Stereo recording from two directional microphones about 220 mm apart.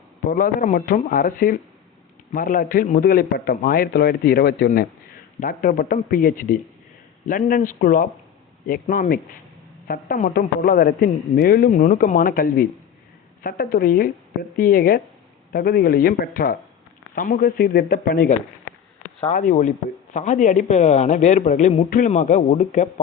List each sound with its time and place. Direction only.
0.3 s a man's voice: 40° left (ahead or behind)